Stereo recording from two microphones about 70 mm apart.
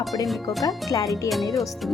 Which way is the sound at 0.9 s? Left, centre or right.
Left.